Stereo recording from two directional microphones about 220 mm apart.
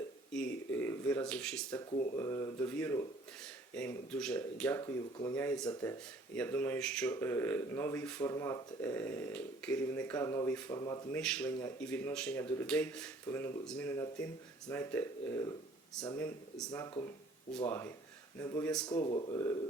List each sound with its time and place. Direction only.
0.3 s speech: 5° left (ahead or behind)
11.2 s speech: 5° left (ahead or behind)
18.9 s speech: 20° left (ahead or behind)